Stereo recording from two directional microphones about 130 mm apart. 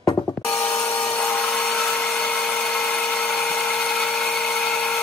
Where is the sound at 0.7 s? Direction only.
10° left (ahead or behind).